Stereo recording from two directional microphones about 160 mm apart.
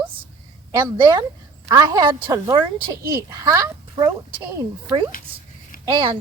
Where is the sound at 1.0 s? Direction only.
30° right (ahead or behind).